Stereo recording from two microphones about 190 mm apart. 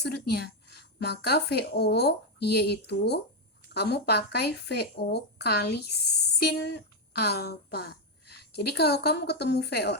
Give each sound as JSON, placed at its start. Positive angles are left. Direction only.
{"t": 0.0, "sound": "speech", "side_deg": 60}